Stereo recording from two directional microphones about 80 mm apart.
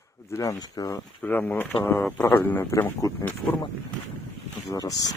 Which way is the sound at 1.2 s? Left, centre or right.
Left.